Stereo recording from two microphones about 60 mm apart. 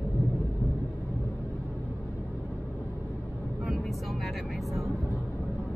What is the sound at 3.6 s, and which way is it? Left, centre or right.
Vehicle, centre.